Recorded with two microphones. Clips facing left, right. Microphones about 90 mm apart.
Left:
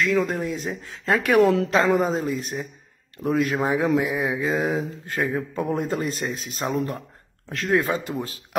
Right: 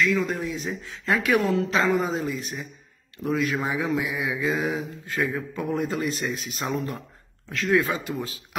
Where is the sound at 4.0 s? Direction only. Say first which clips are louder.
Left 4 dB; 45° left (ahead or behind).